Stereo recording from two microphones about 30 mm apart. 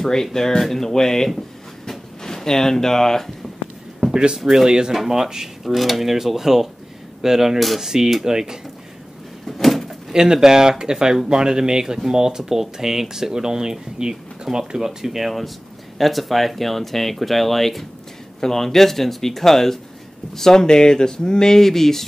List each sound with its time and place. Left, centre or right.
0.0 s speech: centre
1.9 s a sound: centre
4.1 s speech: right
4.9 s speech: centre
5.6 s speech: centre
7.5 s speech: centre
7.8 s speech: centre
9.5 s door: centre
10.1 s speech: centre